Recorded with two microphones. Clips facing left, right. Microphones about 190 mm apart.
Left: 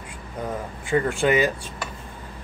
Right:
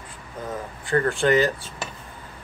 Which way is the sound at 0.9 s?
10° left (ahead or behind).